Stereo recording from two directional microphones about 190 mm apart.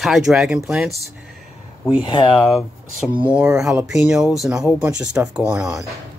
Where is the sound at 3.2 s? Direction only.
10° right (ahead or behind).